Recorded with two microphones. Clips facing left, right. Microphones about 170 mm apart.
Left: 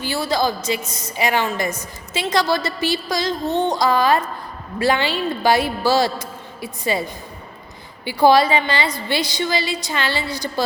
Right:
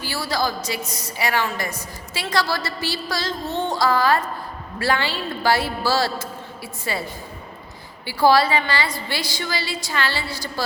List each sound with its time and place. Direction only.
0.0 s a woman's voice: 20° left (ahead or behind)
8.0 s a woman's voice: 20° left (ahead or behind)